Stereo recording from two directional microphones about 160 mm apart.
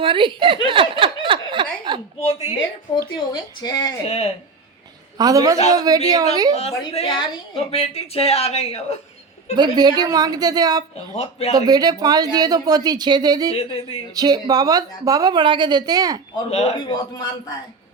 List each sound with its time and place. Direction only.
0.0 s speech: 30° right (ahead or behind)
0.7 s snicker: 30° right (ahead or behind)
3.6 s a man's voice: 25° left (ahead or behind)
4.0 s speech: 40° left (ahead or behind)
5.1 s speech: 25° right (ahead or behind)
6.5 s speech: 40° left (ahead or behind)
9.6 s speech: 25° right (ahead or behind)
11.2 s speech: 40° left (ahead or behind)
11.5 s speech: 25° right (ahead or behind)
13.6 s speech: 35° left (ahead or behind)
14.1 s speech: 25° right (ahead or behind)
16.5 s a man's voice: 35° left (ahead or behind)